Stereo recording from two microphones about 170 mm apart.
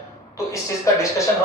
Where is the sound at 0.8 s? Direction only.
20° left (ahead or behind).